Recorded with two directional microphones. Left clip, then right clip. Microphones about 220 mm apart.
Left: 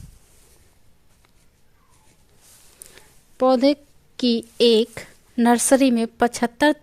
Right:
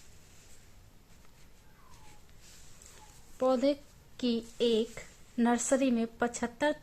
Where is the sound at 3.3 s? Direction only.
40° left (ahead or behind).